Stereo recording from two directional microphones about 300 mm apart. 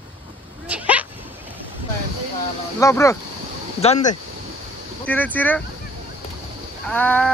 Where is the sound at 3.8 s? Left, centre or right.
Left.